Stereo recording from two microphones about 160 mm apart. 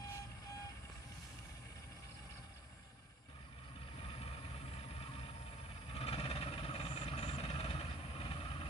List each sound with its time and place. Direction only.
5.9 s vehicle: 40° left (ahead or behind)